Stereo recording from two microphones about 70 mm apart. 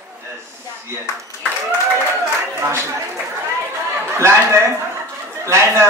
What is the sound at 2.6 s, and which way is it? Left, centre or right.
Speech, right.